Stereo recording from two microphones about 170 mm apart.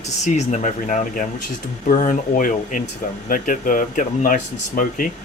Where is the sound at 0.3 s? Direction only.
45° left (ahead or behind).